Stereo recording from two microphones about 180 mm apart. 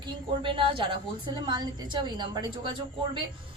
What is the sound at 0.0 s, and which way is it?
Speech, 30° right (ahead or behind).